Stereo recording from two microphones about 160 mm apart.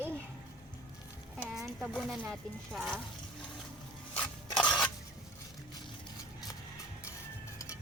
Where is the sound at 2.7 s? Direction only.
Centre (ahead or behind).